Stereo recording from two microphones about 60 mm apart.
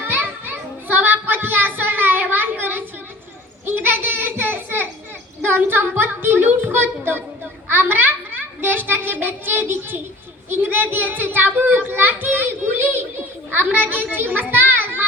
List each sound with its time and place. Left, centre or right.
0.0 s children playing: right
3.7 s a sound: right
10.5 s child singing: right